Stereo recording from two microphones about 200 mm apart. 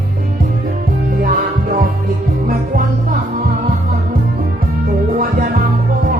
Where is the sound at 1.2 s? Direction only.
45° right (ahead or behind).